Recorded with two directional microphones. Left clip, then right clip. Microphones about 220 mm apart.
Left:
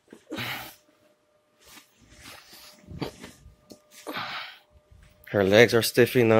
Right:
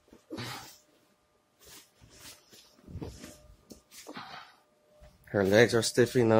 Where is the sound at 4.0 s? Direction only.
20° left (ahead or behind).